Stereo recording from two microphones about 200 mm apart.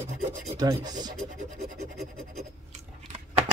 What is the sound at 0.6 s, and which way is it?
Speech, 20° right (ahead or behind).